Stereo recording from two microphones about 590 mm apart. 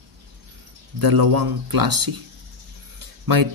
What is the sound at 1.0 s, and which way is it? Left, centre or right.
Speech, right.